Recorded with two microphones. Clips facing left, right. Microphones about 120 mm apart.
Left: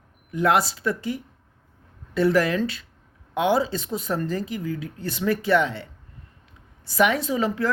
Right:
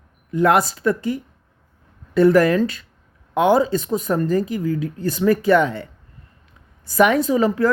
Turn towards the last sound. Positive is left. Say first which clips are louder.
# right 6 dB
turn(degrees=-45)  # may be behind; listen again after turning